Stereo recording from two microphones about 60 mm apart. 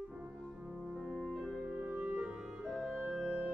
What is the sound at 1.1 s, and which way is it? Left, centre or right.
Music, centre.